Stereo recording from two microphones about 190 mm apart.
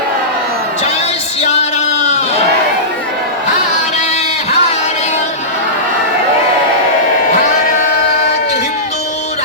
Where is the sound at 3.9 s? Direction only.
35° left (ahead or behind).